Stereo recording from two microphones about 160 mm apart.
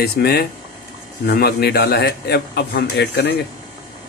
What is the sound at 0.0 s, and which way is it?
A man's voice, 85° left.